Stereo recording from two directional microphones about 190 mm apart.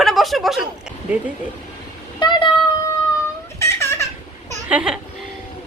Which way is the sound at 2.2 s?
25° left (ahead or behind).